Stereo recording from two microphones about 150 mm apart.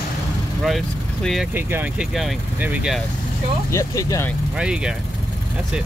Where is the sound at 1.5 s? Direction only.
15° right (ahead or behind).